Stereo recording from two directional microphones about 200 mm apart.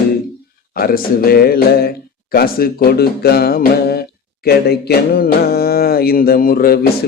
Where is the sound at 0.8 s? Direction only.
45° left (ahead or behind).